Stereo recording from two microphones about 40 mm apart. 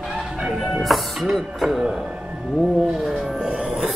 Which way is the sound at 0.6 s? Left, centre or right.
Centre.